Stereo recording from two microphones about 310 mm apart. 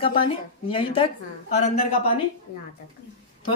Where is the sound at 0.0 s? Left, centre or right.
Centre.